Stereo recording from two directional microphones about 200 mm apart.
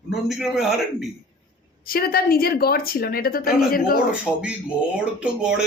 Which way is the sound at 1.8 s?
50° left (ahead or behind).